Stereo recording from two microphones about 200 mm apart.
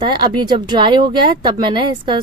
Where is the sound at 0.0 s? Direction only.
20° right (ahead or behind).